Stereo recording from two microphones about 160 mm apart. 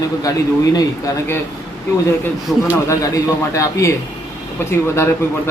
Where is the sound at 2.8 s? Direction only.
20° left (ahead or behind).